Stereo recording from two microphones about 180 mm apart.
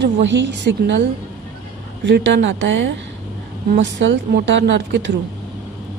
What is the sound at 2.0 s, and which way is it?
Speech, 70° right (ahead or behind).